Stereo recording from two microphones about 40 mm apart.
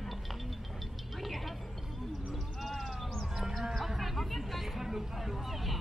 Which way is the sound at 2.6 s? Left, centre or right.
Centre.